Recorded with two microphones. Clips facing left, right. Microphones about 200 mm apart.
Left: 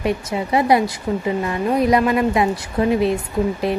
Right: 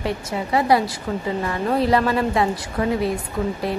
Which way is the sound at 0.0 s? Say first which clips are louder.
Left 4 dB; 20° left (ahead or behind).